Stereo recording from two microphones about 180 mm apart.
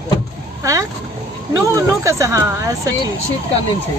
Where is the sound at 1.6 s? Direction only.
15° right (ahead or behind).